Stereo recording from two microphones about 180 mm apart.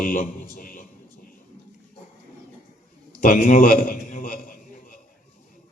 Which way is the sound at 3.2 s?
50° left (ahead or behind).